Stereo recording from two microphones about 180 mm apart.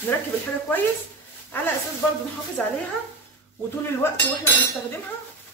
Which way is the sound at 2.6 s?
5° left (ahead or behind).